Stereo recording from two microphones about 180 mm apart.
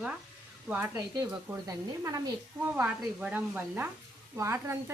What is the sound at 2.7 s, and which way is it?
A woman's voice, 5° right (ahead or behind).